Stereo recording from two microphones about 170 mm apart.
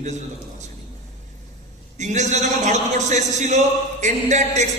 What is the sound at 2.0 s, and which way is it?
Speech, 45° right (ahead or behind).